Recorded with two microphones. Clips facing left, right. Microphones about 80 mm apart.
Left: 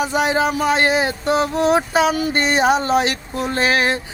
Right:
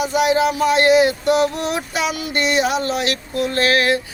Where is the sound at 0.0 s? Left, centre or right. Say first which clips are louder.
Right 1 dB; left.